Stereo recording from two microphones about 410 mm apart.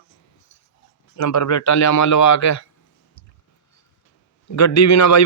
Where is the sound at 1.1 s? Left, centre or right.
Left.